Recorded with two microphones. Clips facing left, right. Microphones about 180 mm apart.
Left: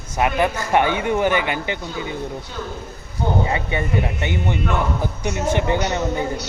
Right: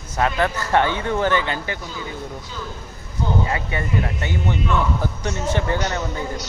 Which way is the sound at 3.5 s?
20° left (ahead or behind).